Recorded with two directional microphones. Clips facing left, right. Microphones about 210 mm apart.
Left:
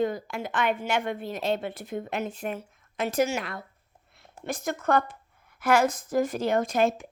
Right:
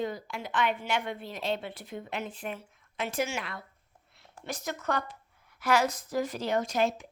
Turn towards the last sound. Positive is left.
turn(degrees=50)  # may be behind; listen again after turning